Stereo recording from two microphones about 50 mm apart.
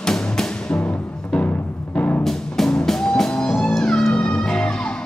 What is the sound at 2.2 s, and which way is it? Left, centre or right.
Music, centre.